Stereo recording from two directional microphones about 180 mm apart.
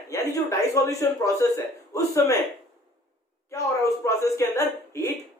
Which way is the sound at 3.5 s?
15° left (ahead or behind).